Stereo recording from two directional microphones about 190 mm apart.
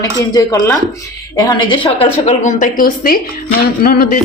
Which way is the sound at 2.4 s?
45° left (ahead or behind).